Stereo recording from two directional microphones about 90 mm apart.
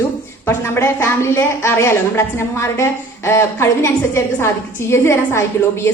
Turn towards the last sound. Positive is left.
turn(degrees=30)  # may be behind; listen again after turning